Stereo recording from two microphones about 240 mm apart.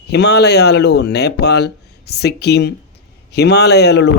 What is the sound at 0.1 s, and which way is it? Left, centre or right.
Speech, left.